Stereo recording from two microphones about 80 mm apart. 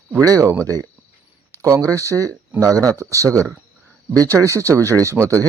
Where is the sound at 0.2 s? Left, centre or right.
Right.